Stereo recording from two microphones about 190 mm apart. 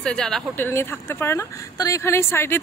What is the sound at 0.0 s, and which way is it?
Speech, 5° left (ahead or behind).